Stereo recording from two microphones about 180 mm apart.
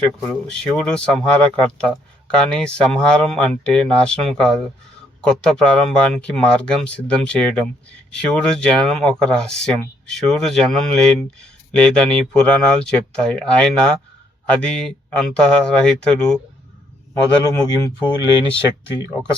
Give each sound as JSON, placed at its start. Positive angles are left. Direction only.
{"t": 0.0, "sound": "speech", "side_deg": 5}
{"t": 17.5, "sound": "speech", "side_deg": 20}